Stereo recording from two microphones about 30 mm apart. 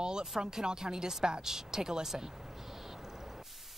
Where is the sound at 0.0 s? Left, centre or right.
Right.